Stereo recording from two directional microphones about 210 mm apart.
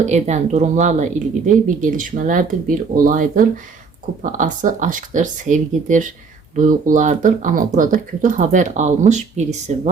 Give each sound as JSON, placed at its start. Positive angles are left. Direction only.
{"t": 0.0, "sound": "speech", "side_deg": -35}